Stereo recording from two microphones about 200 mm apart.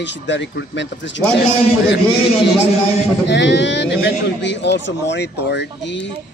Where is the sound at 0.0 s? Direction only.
60° left (ahead or behind).